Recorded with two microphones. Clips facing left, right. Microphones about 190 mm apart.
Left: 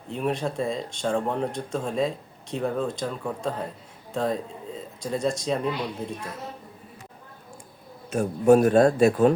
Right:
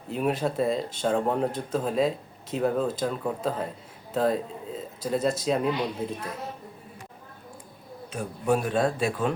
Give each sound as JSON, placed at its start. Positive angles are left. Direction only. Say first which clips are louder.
{"t": 0.1, "sound": "speech", "louder": "right 1 dB", "side_deg": -5}
{"t": 8.1, "sound": "speech", "louder": "left 8 dB", "side_deg": 45}